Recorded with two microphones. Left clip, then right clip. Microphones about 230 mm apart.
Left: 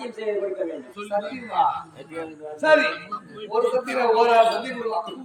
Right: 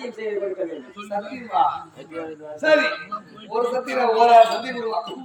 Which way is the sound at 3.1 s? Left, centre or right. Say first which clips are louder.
Right 1 dB; left.